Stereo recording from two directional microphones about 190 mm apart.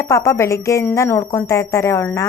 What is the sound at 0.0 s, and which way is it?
A woman's voice, 15° left (ahead or behind).